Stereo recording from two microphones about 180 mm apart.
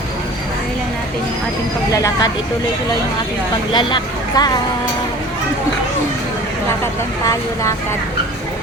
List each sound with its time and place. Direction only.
1.9 s speech: 20° left (ahead or behind)
3.7 s speech: 25° left (ahead or behind)